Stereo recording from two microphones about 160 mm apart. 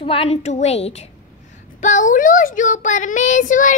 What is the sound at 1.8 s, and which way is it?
A woman's voice, 50° left (ahead or behind).